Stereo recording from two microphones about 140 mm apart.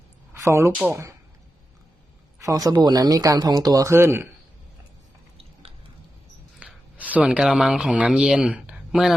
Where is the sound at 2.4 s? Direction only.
25° right (ahead or behind).